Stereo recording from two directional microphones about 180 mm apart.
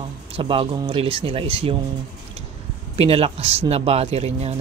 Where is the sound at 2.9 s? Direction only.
35° right (ahead or behind).